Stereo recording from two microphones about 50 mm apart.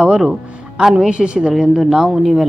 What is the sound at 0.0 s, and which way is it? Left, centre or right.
A woman's voice, centre.